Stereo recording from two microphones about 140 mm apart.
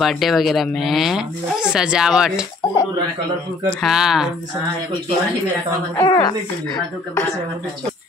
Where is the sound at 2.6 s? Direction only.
25° left (ahead or behind).